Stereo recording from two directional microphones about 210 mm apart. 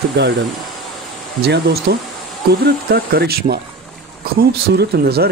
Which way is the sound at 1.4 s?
50° right (ahead or behind).